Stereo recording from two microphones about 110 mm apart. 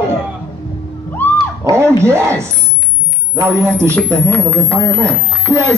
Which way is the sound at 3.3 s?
25° right (ahead or behind).